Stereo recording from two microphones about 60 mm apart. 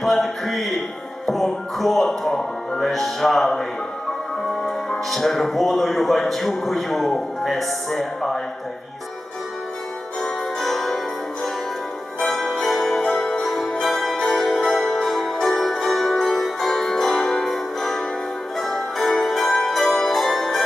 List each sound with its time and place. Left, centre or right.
0.0 s speech: centre
5.1 s speech: centre
10.2 s music: centre
12.2 s music: centre